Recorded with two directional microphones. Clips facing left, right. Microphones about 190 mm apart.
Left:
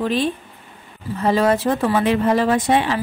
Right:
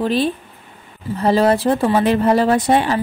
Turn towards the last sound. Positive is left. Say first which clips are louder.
# right 2 dB
turn(degrees=-40)  # may be behind; listen again after turning